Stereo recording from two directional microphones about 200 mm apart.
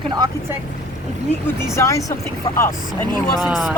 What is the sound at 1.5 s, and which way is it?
Speech, 15° left (ahead or behind).